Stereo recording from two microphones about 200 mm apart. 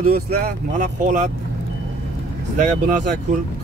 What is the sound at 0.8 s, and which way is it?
Speech, 40° right (ahead or behind).